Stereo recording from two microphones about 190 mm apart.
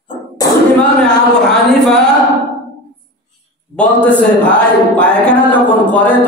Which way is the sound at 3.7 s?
5° left (ahead or behind).